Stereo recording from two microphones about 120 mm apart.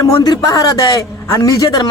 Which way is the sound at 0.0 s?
30° left (ahead or behind).